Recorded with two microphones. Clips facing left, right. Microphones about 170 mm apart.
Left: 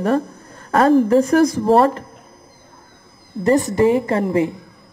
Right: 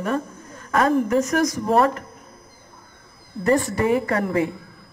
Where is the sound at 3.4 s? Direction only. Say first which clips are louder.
Left 5 dB; 20° left (ahead or behind).